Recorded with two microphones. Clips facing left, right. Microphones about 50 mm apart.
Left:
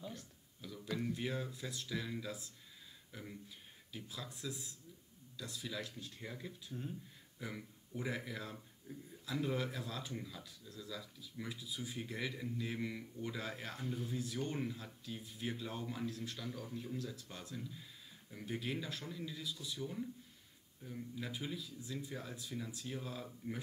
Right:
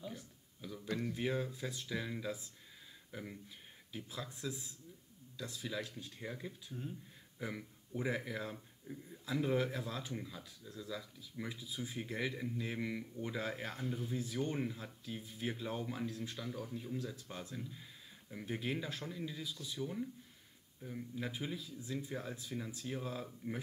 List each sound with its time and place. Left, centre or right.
0.0 s a sound: centre
0.6 s a sound: centre
0.9 s a man's voice: centre
1.2 s speech: centre
10.1 s a man's voice: centre
10.7 s speech: right
13.8 s speech: centre
14.1 s a man's voice: right
17.6 s a man's voice: centre